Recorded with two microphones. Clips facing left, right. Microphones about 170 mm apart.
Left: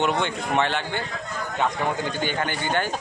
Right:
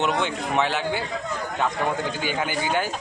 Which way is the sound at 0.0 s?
Centre (ahead or behind).